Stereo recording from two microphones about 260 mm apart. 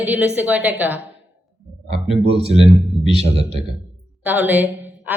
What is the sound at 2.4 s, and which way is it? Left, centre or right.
Speech, right.